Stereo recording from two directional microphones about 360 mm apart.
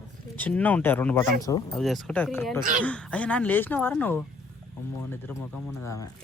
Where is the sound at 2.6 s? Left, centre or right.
Right.